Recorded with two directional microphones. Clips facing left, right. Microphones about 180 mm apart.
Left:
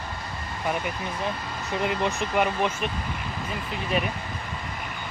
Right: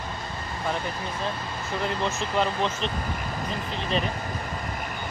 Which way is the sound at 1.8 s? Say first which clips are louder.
Left 2 dB; 15° left (ahead or behind).